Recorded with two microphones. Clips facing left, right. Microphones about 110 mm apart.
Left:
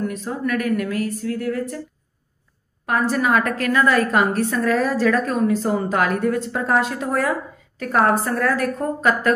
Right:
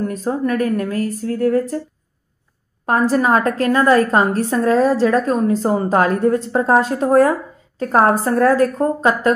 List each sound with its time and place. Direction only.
0.0 s a woman's voice: 40° right (ahead or behind)
2.8 s a woman's voice: 35° right (ahead or behind)